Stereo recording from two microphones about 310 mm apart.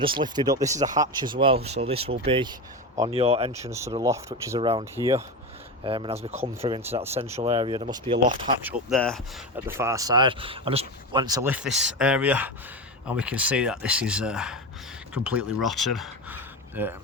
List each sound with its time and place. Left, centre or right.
0.0 s speech: centre
8.7 s speech: centre